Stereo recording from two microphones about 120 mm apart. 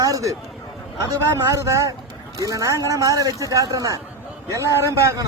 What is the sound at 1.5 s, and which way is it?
Speech, 25° right (ahead or behind).